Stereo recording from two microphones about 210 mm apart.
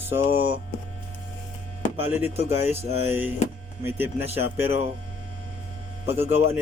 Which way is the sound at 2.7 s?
10° right (ahead or behind).